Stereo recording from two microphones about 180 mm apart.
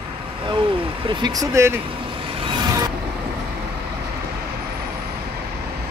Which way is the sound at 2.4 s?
20° right (ahead or behind).